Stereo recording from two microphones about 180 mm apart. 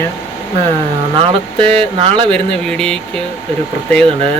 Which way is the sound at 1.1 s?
30° right (ahead or behind).